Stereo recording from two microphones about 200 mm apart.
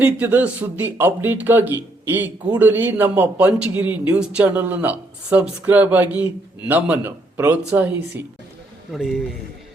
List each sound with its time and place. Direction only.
0.0 s a man's voice: 10° right (ahead or behind)